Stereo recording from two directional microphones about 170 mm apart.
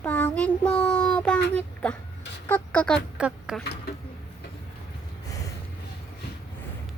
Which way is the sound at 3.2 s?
5° right (ahead or behind).